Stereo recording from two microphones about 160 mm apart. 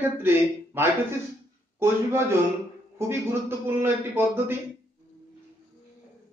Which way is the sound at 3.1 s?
15° right (ahead or behind).